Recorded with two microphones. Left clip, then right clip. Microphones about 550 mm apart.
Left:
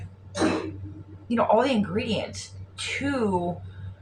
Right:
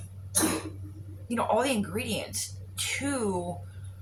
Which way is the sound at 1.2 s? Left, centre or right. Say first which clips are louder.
Left 5 dB; right.